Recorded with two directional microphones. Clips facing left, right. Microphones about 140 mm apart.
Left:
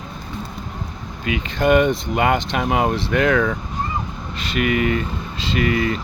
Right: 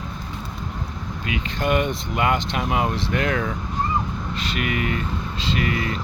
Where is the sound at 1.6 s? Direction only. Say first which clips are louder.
Left 7 dB; 60° left (ahead or behind).